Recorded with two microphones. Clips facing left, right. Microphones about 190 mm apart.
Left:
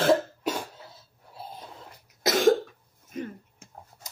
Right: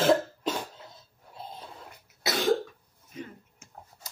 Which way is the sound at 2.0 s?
45° left (ahead or behind).